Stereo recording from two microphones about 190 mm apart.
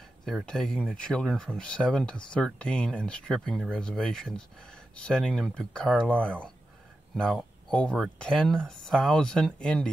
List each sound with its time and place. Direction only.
0.2 s speech: centre (ahead or behind)